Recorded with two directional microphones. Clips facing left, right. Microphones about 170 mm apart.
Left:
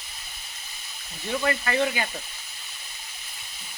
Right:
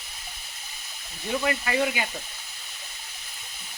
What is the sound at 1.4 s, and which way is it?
Speech, 10° right (ahead or behind).